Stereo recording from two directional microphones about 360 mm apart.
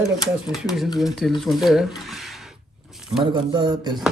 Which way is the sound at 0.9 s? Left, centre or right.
Centre.